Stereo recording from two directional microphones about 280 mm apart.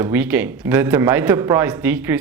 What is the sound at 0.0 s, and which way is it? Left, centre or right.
Speech, centre.